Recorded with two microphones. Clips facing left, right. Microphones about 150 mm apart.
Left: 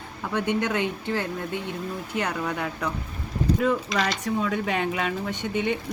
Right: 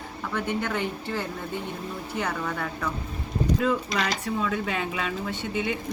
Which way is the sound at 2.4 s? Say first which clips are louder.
Left 2 dB; 10° left (ahead or behind).